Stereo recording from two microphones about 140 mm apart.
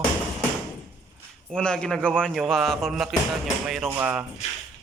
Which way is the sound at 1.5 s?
5° left (ahead or behind).